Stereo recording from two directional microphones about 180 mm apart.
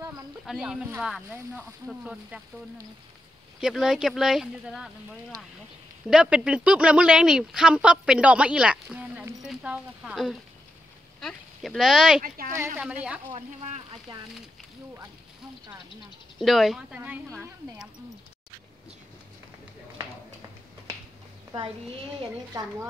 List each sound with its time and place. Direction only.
0.5 s speech: 5° right (ahead or behind)
3.6 s speech: centre (ahead or behind)
6.0 s speech: 5° right (ahead or behind)
12.2 s speech: 50° right (ahead or behind)
12.5 s speech: 15° right (ahead or behind)
13.3 s speech: 35° right (ahead or behind)
16.3 s speech: centre (ahead or behind)